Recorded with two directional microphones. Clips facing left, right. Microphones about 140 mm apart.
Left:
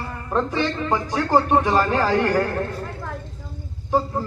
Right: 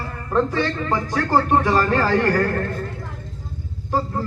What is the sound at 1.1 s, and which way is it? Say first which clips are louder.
A man's voice: even; 15° left (ahead or behind).